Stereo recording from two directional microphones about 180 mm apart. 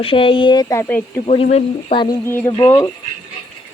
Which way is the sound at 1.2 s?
35° left (ahead or behind).